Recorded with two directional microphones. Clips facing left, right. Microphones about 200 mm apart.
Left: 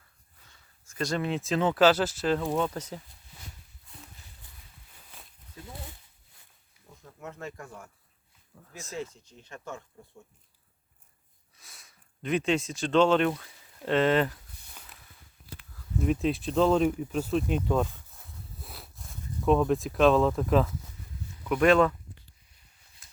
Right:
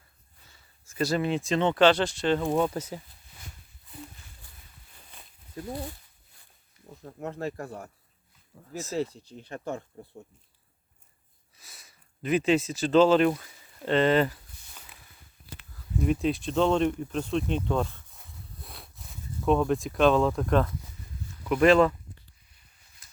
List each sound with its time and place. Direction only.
0.4 s speech: 5° right (ahead or behind)
2.5 s speech: 10° right (ahead or behind)
3.9 s a sound: centre (ahead or behind)
7.0 s speech: 35° right (ahead or behind)
8.5 s speech: 10° right (ahead or behind)
9.0 s speech: 35° right (ahead or behind)
11.5 s a sound: centre (ahead or behind)
15.7 s speech: centre (ahead or behind)
17.9 s a sound: centre (ahead or behind)
21.4 s speech: centre (ahead or behind)